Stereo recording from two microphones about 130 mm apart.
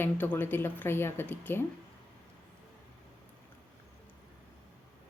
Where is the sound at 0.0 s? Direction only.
15° left (ahead or behind).